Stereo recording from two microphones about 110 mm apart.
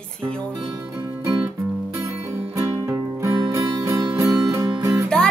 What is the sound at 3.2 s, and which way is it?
Music, 30° right (ahead or behind).